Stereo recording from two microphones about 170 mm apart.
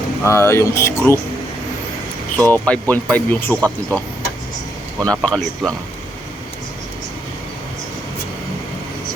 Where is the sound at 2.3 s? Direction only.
5° left (ahead or behind).